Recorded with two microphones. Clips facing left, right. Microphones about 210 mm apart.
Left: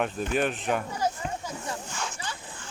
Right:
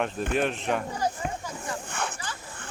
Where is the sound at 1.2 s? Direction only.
60° right (ahead or behind).